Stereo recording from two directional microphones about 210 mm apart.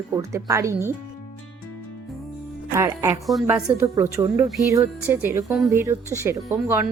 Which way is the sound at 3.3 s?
5° right (ahead or behind).